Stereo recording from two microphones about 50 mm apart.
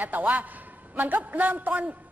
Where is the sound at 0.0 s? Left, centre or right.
Right.